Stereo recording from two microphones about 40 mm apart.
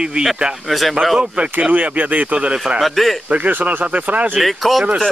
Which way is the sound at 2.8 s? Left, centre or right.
Centre.